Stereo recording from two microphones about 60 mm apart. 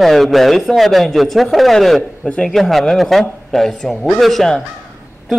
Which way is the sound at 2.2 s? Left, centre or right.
Centre.